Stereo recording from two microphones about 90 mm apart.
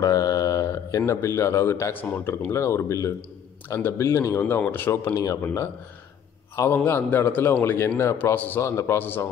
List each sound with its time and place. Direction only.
0.0 s a man's voice: 40° left (ahead or behind); by 5.1 s 25° left (ahead or behind)
5.1 s speech: 40° left (ahead or behind)
6.7 s a man's voice: 20° left (ahead or behind)